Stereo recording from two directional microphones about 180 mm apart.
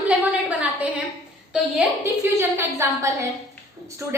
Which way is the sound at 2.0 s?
15° right (ahead or behind).